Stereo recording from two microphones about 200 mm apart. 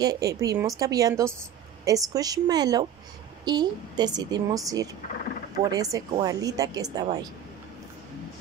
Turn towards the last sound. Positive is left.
turn(degrees=-20)  # may be behind; listen again after turning